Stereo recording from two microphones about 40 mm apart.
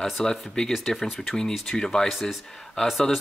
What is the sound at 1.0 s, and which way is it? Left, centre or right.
Speech, centre.